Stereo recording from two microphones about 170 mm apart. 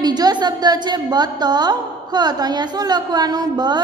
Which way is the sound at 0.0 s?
25° right (ahead or behind).